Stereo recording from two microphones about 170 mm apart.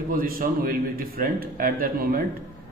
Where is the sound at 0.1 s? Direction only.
55° right (ahead or behind).